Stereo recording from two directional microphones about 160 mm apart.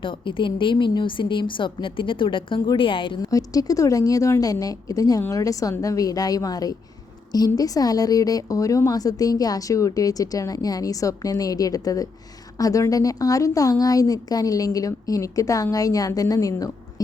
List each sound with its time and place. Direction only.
0.0 s a woman's voice: 30° left (ahead or behind)